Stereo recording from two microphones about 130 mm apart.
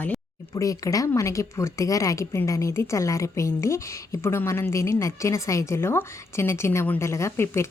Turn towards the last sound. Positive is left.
turn(degrees=20)  # may be behind; listen again after turning